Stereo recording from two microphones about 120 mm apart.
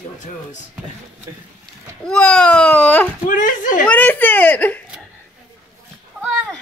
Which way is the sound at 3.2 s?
90° left.